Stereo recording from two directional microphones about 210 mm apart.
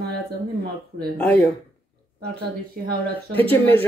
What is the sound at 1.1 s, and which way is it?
Speech, 5° left (ahead or behind).